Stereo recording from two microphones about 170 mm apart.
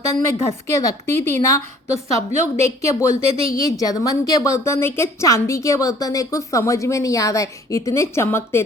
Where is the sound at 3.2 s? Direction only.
35° right (ahead or behind).